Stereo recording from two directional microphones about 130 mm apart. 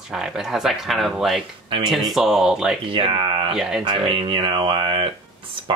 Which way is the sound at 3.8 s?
40° right (ahead or behind).